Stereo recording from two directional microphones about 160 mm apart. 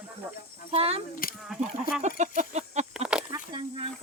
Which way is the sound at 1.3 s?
Centre (ahead or behind).